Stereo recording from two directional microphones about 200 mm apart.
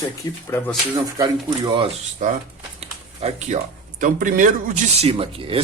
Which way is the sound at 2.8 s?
30° right (ahead or behind).